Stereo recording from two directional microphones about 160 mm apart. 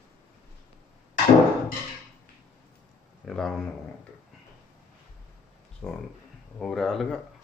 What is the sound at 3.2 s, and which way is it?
Speech, 5° left (ahead or behind).